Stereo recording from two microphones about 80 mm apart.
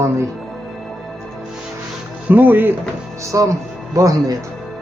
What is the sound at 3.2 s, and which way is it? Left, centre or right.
Speech, right.